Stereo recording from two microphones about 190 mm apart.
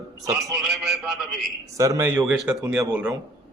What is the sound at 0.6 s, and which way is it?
Speech, centre (ahead or behind).